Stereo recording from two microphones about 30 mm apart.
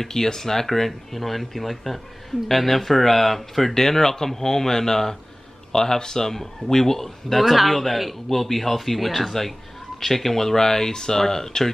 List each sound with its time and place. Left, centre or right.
0.0 s speech: centre
3.7 s speech: centre